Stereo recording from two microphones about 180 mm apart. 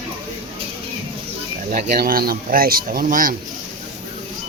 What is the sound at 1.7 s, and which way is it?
Speech, 45° right (ahead or behind).